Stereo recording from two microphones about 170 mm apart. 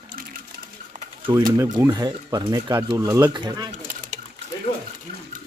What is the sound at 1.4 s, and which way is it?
Speech, 20° right (ahead or behind).